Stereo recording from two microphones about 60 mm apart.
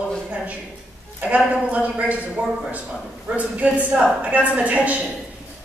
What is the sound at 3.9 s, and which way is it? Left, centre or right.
Speech, centre.